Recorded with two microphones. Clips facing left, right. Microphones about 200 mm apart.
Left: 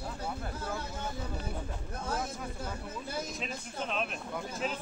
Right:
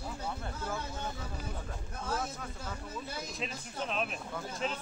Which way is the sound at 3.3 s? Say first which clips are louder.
Left 1 dB; centre (ahead or behind).